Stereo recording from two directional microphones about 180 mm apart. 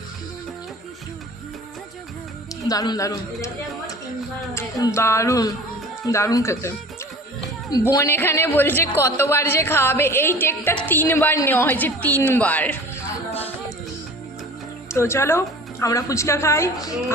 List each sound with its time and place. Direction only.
2.6 s a man's voice: 20° left (ahead or behind)
4.5 s a woman's voice: 15° left (ahead or behind)
14.8 s a woman's voice: 15° left (ahead or behind)